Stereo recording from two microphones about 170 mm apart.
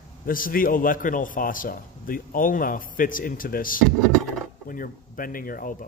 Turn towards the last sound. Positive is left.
turn(degrees=55)  # may be behind; listen again after turning